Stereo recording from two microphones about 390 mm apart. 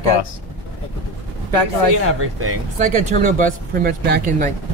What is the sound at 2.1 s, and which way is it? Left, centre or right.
Speech, right.